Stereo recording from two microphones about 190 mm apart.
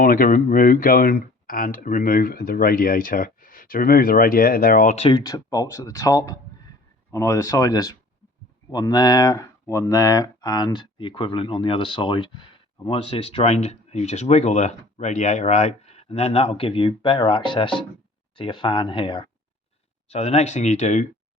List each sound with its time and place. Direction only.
0.0 s speech: 45° left (ahead or behind)
5.2 s speech: 20° left (ahead or behind); by 21.1 s 40° left (ahead or behind)